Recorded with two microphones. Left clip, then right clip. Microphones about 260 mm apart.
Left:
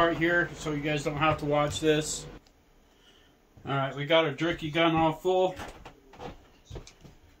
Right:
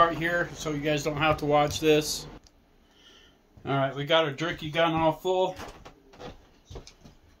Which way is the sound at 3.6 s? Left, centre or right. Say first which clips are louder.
Right 2 dB; right.